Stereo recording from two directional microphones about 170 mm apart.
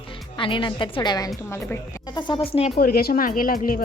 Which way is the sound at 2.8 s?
60° left (ahead or behind).